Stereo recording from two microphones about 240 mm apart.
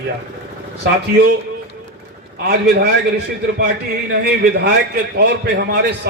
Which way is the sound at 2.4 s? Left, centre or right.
Right.